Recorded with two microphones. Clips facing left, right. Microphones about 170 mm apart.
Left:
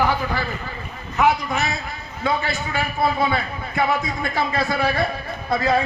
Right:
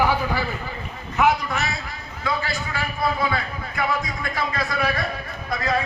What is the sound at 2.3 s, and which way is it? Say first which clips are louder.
A man's voice: left 3 dB; 25° left (ahead or behind).